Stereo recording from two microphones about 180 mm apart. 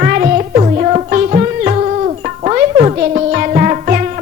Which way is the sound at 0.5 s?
35° right (ahead or behind).